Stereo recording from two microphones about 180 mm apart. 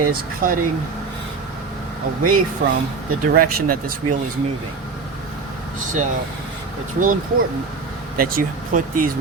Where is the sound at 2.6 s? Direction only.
65° right (ahead or behind).